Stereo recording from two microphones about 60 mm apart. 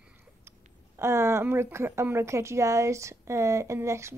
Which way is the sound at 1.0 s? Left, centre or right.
Right.